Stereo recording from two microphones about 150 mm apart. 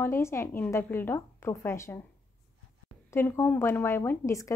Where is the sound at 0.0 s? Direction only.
15° left (ahead or behind).